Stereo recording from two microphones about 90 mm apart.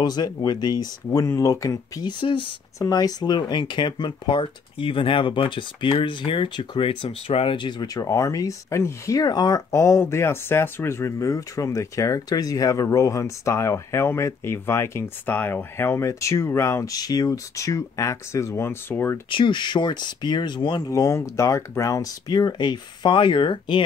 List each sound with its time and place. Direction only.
0.0 s speech: 50° left (ahead or behind)
2.0 s speech: 65° left (ahead or behind)
2.8 s speech: 45° left (ahead or behind); by 7.9 s 60° left (ahead or behind)
7.9 s speech: 35° left (ahead or behind)
9.7 s speech: 30° left (ahead or behind)
16.8 s speech: 45° left (ahead or behind); by 19.1 s 25° left (ahead or behind)
19.3 s speech: 60° left (ahead or behind)
20.9 s speech: 35° left (ahead or behind)
22.3 s speech: 50° left (ahead or behind)